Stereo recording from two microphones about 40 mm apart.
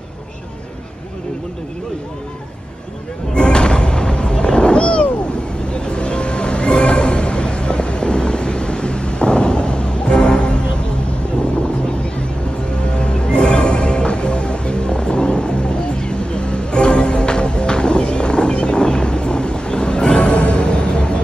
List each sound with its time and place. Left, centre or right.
3.3 s music: left
5.7 s a sound: left
12.8 s music: left